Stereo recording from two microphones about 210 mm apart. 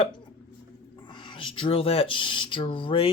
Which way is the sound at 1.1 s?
20° left (ahead or behind).